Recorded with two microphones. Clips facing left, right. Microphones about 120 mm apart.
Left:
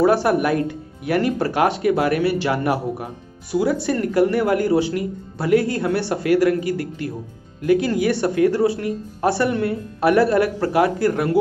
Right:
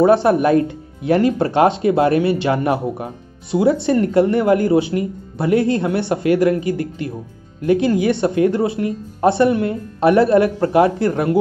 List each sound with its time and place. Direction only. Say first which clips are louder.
0.0 s speech: right 4 dB; 25° right (ahead or behind)